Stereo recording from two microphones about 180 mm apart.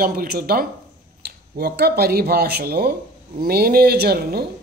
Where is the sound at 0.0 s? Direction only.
55° right (ahead or behind).